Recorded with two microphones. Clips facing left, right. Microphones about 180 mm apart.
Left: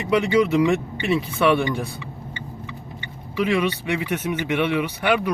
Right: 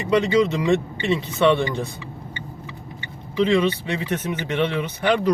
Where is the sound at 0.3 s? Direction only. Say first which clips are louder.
Left 1 dB; 10° left (ahead or behind).